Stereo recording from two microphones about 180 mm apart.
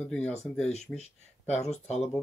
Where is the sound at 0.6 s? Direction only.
40° left (ahead or behind).